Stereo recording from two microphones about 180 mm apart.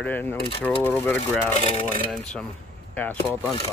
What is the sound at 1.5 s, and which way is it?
Speech, 35° left (ahead or behind).